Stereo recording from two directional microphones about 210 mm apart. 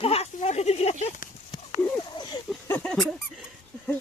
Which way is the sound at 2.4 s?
5° left (ahead or behind).